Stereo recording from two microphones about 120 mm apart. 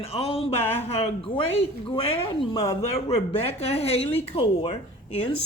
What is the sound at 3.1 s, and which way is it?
Speech, 55° left (ahead or behind).